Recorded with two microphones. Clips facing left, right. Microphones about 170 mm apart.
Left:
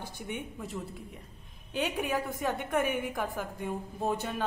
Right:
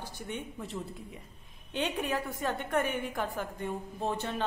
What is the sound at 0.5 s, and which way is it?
A woman's voice, centre (ahead or behind).